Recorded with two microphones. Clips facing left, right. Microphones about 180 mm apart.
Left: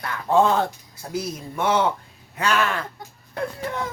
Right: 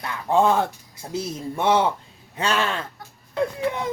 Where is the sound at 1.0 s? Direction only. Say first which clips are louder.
Left 1 dB; 20° right (ahead or behind).